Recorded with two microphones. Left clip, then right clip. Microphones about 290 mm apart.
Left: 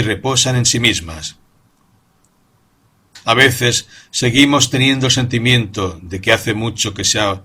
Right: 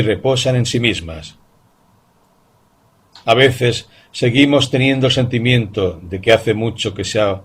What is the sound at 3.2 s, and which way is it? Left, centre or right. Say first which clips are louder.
Speech: even; left.